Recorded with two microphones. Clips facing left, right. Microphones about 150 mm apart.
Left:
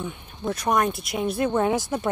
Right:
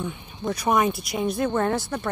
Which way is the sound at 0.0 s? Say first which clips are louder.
Right 1 dB; centre (ahead or behind).